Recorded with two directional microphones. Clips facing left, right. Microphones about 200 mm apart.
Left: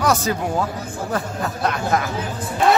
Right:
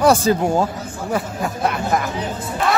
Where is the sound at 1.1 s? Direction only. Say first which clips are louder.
Right 3 dB; 10° right (ahead or behind).